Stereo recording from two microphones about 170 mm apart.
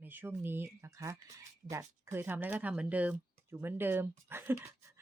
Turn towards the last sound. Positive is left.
turn(degrees=-15)  # may be behind; listen again after turning